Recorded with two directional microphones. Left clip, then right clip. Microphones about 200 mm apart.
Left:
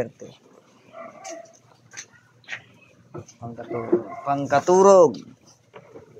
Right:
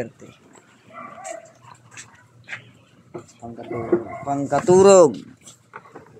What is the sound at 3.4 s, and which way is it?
Speech, 15° left (ahead or behind).